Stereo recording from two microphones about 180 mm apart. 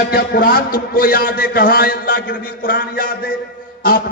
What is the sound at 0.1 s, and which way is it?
A man's voice, 55° left (ahead or behind).